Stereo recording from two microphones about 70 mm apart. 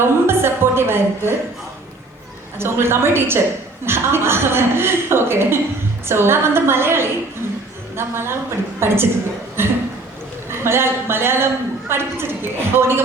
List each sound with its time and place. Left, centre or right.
0.0 s a woman's voice: right
2.6 s a woman's voice: right